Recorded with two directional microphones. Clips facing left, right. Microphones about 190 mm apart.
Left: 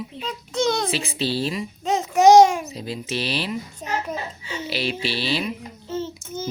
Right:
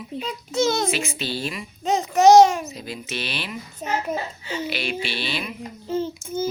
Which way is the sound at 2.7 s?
30° left (ahead or behind).